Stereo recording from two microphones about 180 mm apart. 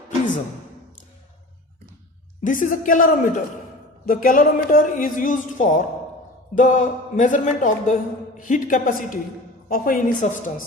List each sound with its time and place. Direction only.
2.4 s a woman's voice: 45° left (ahead or behind)